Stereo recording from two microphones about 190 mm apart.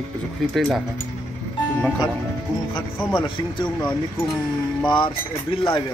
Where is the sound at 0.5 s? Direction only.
Centre (ahead or behind).